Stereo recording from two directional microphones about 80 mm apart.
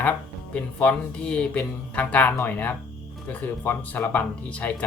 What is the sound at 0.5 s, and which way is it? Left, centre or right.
Speech, centre.